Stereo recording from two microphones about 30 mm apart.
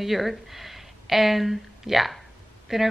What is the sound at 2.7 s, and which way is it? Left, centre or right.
Speech, centre.